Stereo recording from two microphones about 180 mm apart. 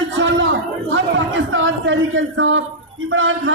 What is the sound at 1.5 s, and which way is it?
A man's voice, 90° right.